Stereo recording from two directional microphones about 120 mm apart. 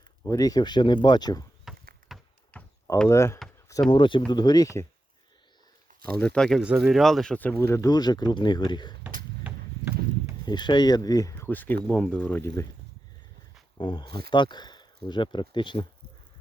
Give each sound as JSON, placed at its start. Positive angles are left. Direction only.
{"t": 0.3, "sound": "speech", "side_deg": 30}
{"t": 1.6, "sound": "horse", "side_deg": 0}
{"t": 2.5, "sound": "a sound", "side_deg": 15}
{"t": 3.1, "sound": "speech", "side_deg": 25}
{"t": 3.7, "sound": "speech", "side_deg": 35}
{"t": 6.1, "sound": "speech", "side_deg": 10}
{"t": 6.6, "sound": "speech", "side_deg": -5}
{"t": 9.0, "sound": "a sound", "side_deg": -15}
{"t": 10.4, "sound": "speech", "side_deg": 40}
{"t": 11.4, "sound": "speech", "side_deg": 15}
{"t": 13.7, "sound": "speech", "side_deg": 40}